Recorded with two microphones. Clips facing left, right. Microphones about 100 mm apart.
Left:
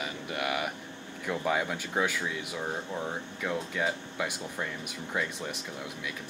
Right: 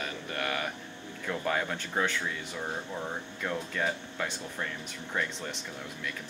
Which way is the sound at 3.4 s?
10° left (ahead or behind).